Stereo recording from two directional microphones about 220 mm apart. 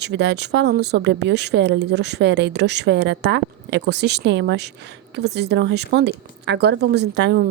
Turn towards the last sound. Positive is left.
turn(degrees=-50)  # may be behind; listen again after turning